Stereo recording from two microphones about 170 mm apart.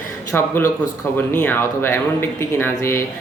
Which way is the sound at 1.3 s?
10° left (ahead or behind).